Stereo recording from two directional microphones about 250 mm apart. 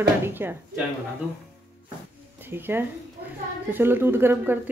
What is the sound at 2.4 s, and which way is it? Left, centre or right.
Speech, centre.